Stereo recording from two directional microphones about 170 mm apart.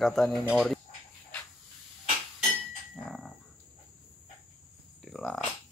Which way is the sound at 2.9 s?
5° left (ahead or behind).